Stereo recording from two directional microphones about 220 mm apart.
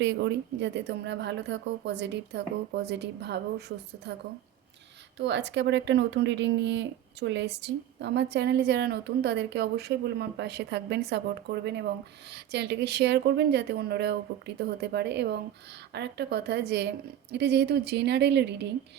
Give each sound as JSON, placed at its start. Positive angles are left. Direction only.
{"t": 0.0, "sound": "speech", "side_deg": -55}
{"t": 5.1, "sound": "speech", "side_deg": -55}